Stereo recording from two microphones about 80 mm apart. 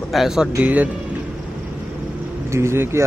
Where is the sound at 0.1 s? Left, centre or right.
Centre.